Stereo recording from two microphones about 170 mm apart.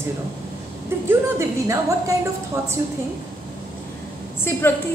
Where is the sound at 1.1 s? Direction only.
15° right (ahead or behind).